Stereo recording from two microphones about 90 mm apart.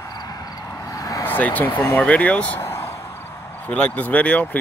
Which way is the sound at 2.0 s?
10° left (ahead or behind).